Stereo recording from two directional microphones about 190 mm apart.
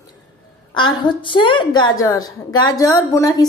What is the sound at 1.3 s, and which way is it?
A woman's voice, 25° left (ahead or behind).